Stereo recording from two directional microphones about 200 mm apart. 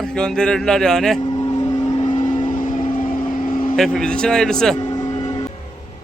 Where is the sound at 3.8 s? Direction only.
5° left (ahead or behind).